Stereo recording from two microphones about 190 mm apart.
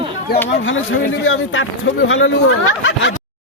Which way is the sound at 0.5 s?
80° left.